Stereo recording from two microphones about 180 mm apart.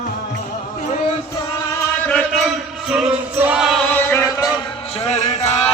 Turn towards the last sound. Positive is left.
turn(degrees=40)  # may be behind; listen again after turning